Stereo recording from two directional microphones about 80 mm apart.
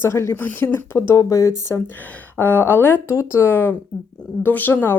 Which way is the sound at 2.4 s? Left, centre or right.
Left.